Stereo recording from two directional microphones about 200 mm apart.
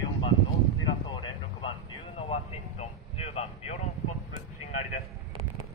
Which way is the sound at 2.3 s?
30° left (ahead or behind).